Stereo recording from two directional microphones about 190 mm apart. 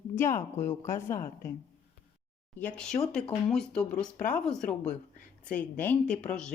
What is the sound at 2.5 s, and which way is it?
Speech, 5° left (ahead or behind).